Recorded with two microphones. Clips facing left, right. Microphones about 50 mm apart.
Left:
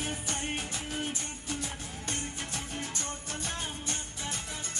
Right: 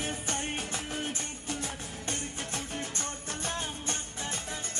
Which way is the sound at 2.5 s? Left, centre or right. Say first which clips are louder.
Right 1 dB; right.